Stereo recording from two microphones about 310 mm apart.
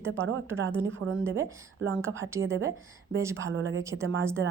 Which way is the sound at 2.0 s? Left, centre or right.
Centre.